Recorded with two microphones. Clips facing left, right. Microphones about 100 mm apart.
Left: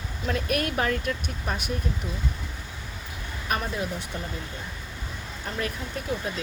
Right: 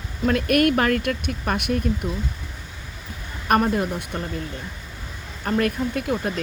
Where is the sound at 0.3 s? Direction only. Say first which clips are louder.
Right 9 dB; 70° right (ahead or behind).